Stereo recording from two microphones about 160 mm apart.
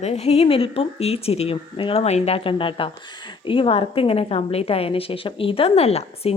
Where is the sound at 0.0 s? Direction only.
40° left (ahead or behind).